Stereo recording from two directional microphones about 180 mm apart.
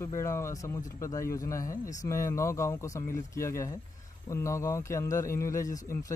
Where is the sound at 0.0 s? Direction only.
15° left (ahead or behind).